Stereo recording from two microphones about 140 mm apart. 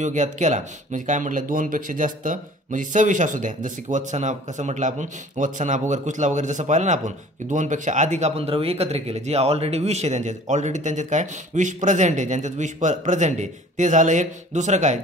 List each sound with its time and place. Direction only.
0.0 s speech: 60° right (ahead or behind)